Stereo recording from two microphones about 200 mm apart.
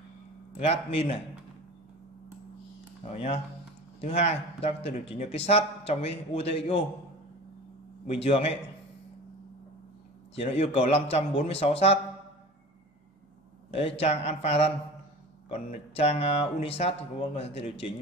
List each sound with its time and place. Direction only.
0.6 s speech: 30° left (ahead or behind)
3.1 s speech: 30° left (ahead or behind)
8.2 s speech: 30° left (ahead or behind)
10.3 s speech: 30° left (ahead or behind)
13.7 s a man's voice: 30° left (ahead or behind)